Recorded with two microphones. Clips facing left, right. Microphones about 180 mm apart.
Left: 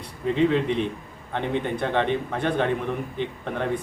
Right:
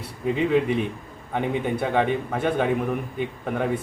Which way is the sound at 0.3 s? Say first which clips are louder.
Even; 5° right (ahead or behind).